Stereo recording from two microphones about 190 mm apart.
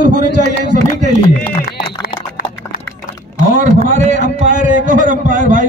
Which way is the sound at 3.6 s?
40° right (ahead or behind).